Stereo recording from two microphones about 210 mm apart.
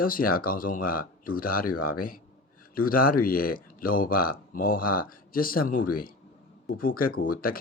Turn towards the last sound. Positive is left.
turn(degrees=45)  # may be behind; listen again after turning